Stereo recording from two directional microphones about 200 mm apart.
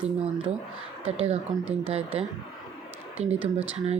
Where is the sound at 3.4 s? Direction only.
75° right (ahead or behind).